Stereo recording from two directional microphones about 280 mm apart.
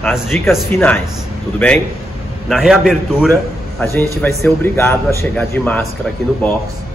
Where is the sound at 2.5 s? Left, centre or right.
Centre.